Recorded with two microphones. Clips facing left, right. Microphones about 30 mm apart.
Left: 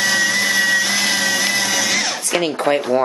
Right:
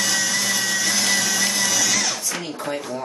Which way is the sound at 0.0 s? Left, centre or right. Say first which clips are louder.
Left 6 dB; left.